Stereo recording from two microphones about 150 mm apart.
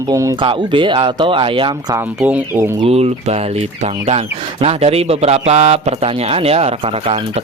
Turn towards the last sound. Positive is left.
turn(degrees=-40)  # may be behind; listen again after turning